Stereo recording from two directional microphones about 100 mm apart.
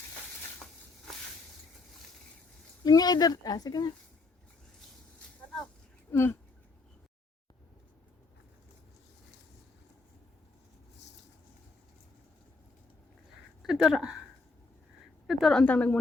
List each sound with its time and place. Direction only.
2.8 s speech: 40° left (ahead or behind)
6.1 s speech: 25° left (ahead or behind)
13.6 s speech: 5° right (ahead or behind)
15.3 s a woman's voice: centre (ahead or behind)
15.6 s a woman's voice: 15° left (ahead or behind)